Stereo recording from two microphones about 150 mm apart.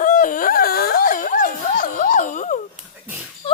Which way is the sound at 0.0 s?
60° left (ahead or behind).